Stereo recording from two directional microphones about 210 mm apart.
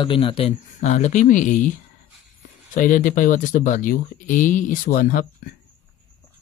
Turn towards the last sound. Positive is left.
turn(degrees=40)  # may be behind; listen again after turning